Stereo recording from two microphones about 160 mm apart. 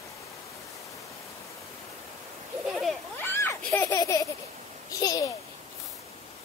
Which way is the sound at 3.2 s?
15° left (ahead or behind).